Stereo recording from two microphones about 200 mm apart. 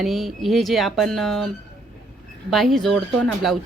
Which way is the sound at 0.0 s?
Centre (ahead or behind).